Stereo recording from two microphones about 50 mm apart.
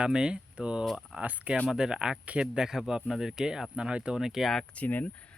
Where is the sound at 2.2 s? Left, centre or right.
Right.